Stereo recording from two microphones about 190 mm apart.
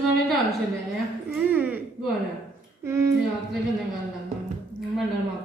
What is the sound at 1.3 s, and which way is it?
Speech, 10° right (ahead or behind).